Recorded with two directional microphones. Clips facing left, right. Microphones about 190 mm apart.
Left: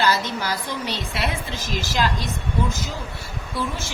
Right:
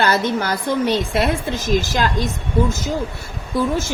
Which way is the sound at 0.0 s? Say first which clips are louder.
Right 4 dB; 55° right (ahead or behind).